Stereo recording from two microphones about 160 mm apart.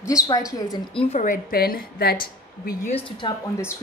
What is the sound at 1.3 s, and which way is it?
Speech, 70° left (ahead or behind).